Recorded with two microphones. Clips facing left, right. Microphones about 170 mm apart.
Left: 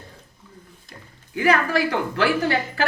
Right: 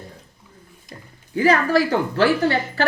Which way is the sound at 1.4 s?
35° right (ahead or behind).